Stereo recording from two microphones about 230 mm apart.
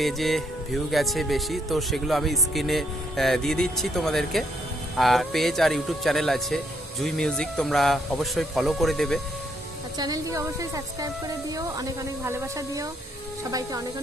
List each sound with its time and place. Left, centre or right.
0.0 s speech: centre
10.0 s speech: centre